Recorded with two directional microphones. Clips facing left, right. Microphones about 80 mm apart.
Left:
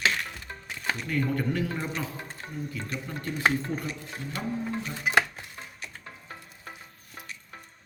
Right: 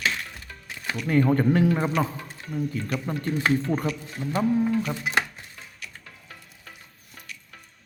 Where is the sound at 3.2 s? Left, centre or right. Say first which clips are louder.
Right 1 dB; left.